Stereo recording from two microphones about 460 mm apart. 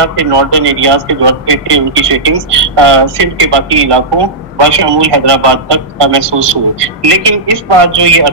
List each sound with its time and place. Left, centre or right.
0.2 s a man's voice: right